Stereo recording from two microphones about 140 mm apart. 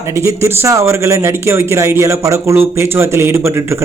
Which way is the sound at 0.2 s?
20° right (ahead or behind).